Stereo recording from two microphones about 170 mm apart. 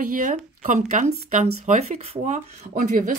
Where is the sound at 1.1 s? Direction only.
65° right (ahead or behind).